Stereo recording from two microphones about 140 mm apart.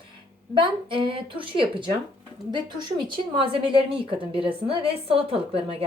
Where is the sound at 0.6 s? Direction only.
35° right (ahead or behind).